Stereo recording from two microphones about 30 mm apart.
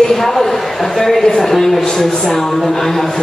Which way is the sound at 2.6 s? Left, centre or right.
Centre.